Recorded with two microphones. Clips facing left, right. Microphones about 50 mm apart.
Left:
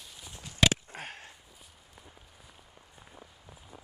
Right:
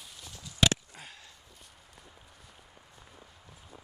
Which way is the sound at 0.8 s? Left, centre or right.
Left.